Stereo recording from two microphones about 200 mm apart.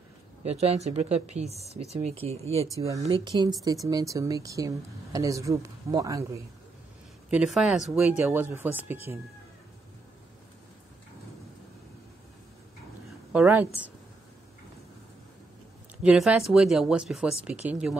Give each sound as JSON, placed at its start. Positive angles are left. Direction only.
{"t": 0.4, "sound": "speech", "side_deg": -30}
{"t": 2.8, "sound": "speech", "side_deg": -15}
{"t": 7.2, "sound": "speech", "side_deg": -5}
{"t": 13.3, "sound": "speech", "side_deg": -5}
{"t": 16.0, "sound": "speech", "side_deg": -5}